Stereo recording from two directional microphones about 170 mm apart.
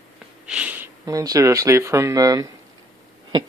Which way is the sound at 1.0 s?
20° right (ahead or behind).